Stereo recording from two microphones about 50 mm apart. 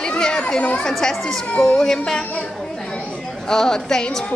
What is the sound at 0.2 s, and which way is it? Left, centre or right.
Children playing, centre.